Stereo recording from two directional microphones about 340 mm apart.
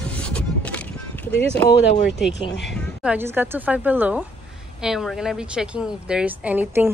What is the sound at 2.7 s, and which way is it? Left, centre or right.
Speech, centre.